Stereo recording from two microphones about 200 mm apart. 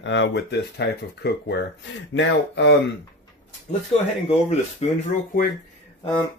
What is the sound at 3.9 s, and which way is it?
Speech, 30° left (ahead or behind).